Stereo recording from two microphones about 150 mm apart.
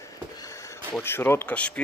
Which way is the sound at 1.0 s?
15° left (ahead or behind).